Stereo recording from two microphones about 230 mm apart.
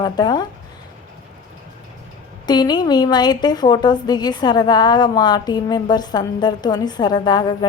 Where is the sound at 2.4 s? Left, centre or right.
Centre.